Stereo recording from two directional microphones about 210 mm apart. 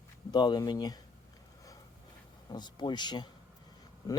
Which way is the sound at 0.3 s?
20° left (ahead or behind).